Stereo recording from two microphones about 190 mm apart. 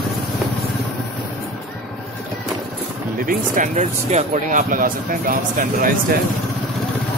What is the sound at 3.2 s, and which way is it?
Speech, 45° right (ahead or behind).